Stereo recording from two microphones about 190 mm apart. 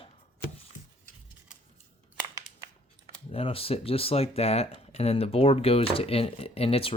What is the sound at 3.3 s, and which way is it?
Speech, 30° left (ahead or behind).